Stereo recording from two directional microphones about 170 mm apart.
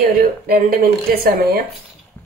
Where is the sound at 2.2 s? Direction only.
10° left (ahead or behind).